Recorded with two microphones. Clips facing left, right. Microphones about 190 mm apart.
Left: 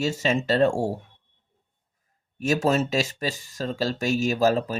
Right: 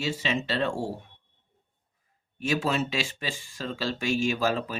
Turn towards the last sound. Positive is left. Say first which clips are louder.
# left 5 dB
turn(degrees=40)  # may be behind; listen again after turning